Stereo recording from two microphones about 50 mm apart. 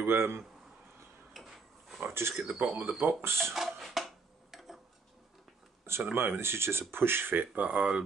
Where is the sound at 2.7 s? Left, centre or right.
Right.